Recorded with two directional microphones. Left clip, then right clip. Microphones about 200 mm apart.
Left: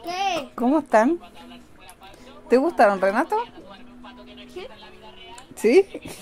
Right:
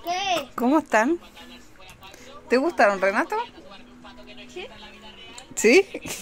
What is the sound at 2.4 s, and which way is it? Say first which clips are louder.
Speech: left 2 dB; 20° left (ahead or behind).